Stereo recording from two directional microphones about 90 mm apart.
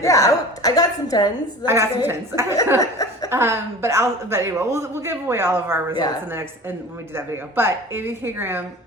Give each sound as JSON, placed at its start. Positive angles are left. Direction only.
{"t": 0.0, "sound": "a woman's voice", "side_deg": 35}
{"t": 1.6, "sound": "a man's voice", "side_deg": -30}
{"t": 2.7, "sound": "speech", "side_deg": 40}
{"t": 3.2, "sound": "a man's voice", "side_deg": -30}
{"t": 7.2, "sound": "a man's voice", "side_deg": -25}